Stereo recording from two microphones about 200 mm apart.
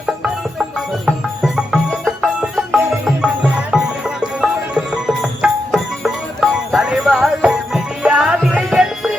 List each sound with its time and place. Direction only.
1.0 s music: 5° right (ahead or behind)